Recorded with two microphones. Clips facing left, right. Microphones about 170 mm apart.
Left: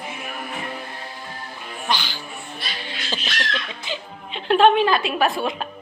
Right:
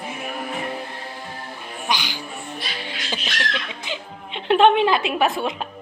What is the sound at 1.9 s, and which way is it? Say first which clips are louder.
Music: even; 15° right (ahead or behind).